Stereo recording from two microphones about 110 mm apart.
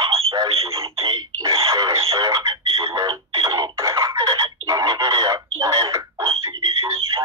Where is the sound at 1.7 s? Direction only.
30° right (ahead or behind).